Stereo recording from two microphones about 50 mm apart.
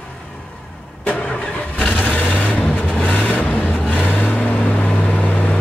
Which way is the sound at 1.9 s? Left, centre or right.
Left.